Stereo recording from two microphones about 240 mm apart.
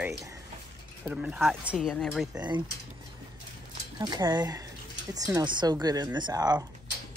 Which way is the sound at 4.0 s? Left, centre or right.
Centre.